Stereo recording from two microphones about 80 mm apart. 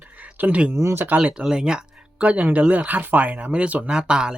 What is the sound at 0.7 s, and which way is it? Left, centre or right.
Speech, right.